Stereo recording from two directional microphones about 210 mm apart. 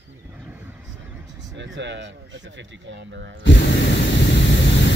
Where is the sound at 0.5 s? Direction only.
10° right (ahead or behind).